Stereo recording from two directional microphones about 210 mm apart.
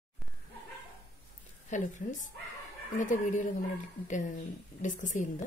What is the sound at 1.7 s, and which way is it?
Speech, 35° left (ahead or behind).